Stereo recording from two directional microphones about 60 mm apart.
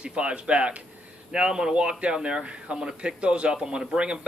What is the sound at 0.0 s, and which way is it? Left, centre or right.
A man's voice, centre.